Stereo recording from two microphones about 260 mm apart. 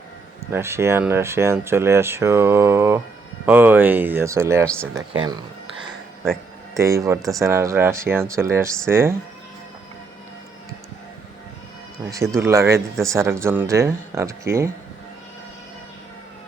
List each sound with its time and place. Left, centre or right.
0.5 s speech: centre
4.6 s speech: centre
4.9 s speech: centre
6.7 s speech: centre
12.0 s speech: centre